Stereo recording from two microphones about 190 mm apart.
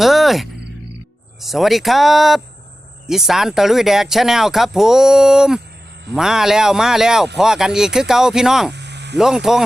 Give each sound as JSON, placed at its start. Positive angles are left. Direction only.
{"t": 0.0, "sound": "speech", "side_deg": 0}
{"t": 8.7, "sound": "a sound", "side_deg": -65}
{"t": 9.1, "sound": "speech", "side_deg": -5}